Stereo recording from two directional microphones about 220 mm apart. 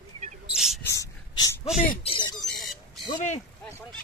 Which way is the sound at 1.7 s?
30° left (ahead or behind).